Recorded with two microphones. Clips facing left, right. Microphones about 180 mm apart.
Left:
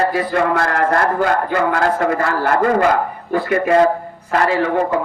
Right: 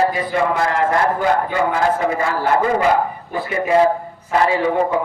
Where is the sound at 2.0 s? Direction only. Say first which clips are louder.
Left 2 dB; 60° left (ahead or behind).